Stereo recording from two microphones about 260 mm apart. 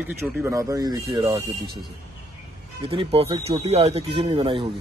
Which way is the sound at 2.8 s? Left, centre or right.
Right.